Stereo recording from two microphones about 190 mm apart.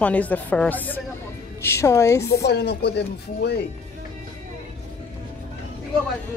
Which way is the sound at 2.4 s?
60° left (ahead or behind).